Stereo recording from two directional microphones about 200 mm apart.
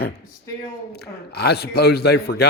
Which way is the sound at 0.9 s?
55° left (ahead or behind).